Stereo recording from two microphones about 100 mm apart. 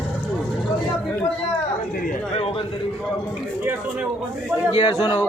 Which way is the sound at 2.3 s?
70° left (ahead or behind).